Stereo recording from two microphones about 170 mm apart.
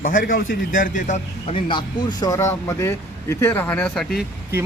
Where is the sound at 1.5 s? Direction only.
30° left (ahead or behind); by 4.1 s 5° left (ahead or behind).